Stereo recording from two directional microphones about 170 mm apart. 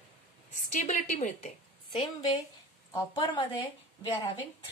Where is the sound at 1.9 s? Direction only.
25° left (ahead or behind).